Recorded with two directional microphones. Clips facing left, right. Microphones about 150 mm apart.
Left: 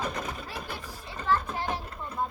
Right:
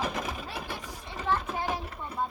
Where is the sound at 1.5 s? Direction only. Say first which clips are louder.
Right 1 dB; 5° right (ahead or behind).